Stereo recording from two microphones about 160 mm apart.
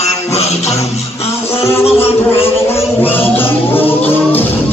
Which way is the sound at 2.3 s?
15° left (ahead or behind).